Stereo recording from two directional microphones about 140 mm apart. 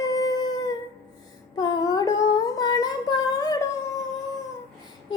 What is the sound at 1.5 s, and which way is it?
Humming, 30° left (ahead or behind).